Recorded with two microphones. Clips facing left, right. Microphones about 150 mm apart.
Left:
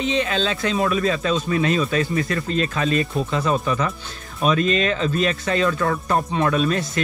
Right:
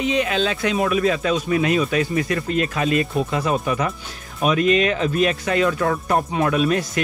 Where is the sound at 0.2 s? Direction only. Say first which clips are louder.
Right 1 dB; 15° right (ahead or behind).